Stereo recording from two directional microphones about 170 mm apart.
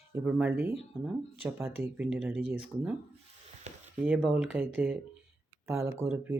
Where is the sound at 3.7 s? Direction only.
40° right (ahead or behind).